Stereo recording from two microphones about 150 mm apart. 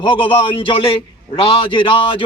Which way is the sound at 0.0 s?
35° left (ahead or behind).